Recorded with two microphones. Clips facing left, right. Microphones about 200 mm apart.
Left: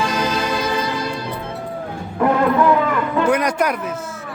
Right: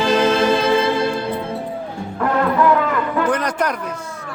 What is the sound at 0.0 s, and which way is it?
Music, 25° right (ahead or behind).